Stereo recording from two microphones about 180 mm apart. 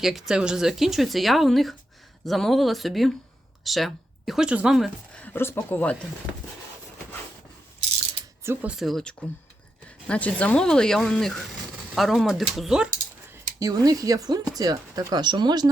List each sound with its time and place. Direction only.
0.0 s speech: centre (ahead or behind)
5.2 s speech: 10° left (ahead or behind)
8.4 s speech: 5° right (ahead or behind)
13.6 s speech: 20° right (ahead or behind)